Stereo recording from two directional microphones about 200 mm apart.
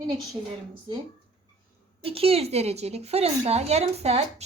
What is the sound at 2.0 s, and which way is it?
A woman's voice, 30° right (ahead or behind).